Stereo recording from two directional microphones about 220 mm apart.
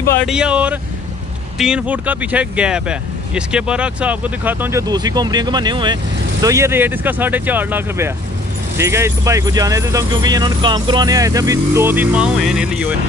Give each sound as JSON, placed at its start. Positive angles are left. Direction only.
{"t": 0.0, "sound": "speech", "side_deg": 10}
{"t": 0.3, "sound": "speech", "side_deg": -5}